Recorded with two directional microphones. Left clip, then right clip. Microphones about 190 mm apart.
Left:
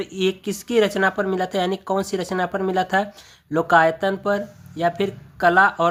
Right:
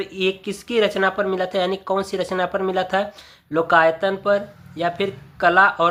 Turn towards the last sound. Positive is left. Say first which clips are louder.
# right 1 dB
turn(degrees=20)  # may be behind; listen again after turning